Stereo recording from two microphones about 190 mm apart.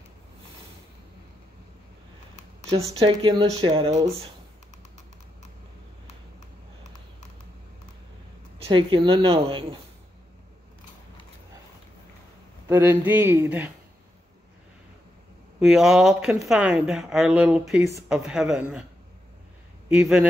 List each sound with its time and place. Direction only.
3.0 s speech: 25° right (ahead or behind)
8.5 s speech: 25° right (ahead or behind)
12.6 s speech: 15° right (ahead or behind)
15.6 s a woman's voice: centre (ahead or behind)
19.9 s a woman's voice: 5° right (ahead or behind)